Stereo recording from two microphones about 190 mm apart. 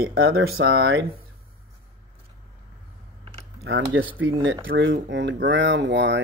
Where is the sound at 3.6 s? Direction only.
90° right; by 6.2 s 70° right (ahead or behind).